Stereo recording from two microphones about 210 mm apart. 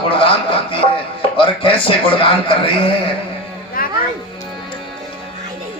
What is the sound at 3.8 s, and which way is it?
Music, 45° left (ahead or behind).